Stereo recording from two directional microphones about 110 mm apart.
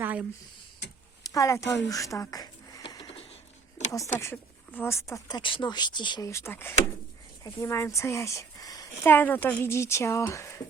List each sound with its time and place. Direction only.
0.0 s a sound: 15° right (ahead or behind)
1.2 s speech: 30° left (ahead or behind)
3.9 s a woman's voice: 25° left (ahead or behind)
5.3 s speech: 50° left (ahead or behind)
6.2 s a woman's voice: 25° left (ahead or behind)
9.0 s a woman's voice: 15° left (ahead or behind)